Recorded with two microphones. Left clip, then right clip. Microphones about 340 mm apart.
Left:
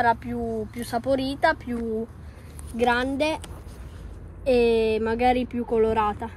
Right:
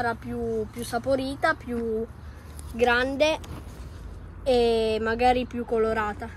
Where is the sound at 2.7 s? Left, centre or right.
Centre.